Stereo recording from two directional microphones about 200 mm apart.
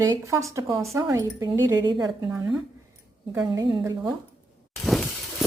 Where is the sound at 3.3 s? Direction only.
15° right (ahead or behind).